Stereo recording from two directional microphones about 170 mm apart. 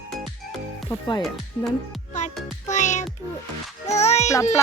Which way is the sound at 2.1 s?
45° left (ahead or behind).